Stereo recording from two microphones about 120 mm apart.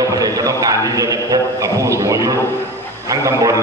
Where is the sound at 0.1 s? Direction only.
30° right (ahead or behind).